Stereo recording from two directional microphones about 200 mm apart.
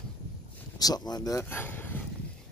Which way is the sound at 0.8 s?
20° left (ahead or behind).